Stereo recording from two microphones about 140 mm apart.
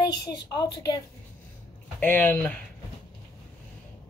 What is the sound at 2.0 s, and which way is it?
Speech, 10° left (ahead or behind).